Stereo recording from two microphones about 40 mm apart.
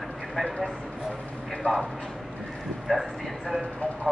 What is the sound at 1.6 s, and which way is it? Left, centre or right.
Speech, left.